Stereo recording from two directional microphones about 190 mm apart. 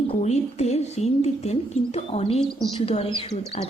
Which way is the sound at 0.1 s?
35° left (ahead or behind).